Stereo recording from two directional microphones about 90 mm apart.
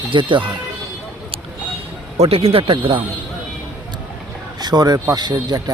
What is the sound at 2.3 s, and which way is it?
Speech, 90° right.